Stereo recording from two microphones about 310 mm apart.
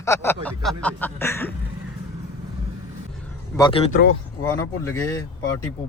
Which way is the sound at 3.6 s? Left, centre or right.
Centre.